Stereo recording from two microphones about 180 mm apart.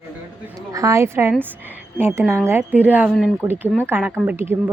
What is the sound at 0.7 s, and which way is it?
A woman's voice, 15° right (ahead or behind).